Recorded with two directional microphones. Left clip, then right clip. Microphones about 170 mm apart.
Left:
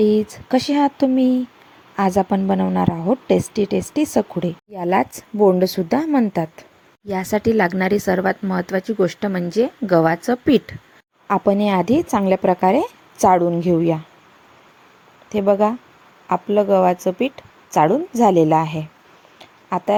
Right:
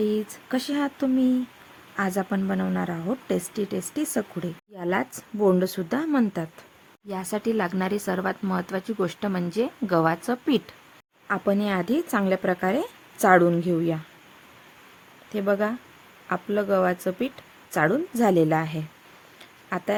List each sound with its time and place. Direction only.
0.0 s a woman's voice: 25° left (ahead or behind)
15.3 s a woman's voice: 15° left (ahead or behind)
19.4 s a sound: 15° left (ahead or behind)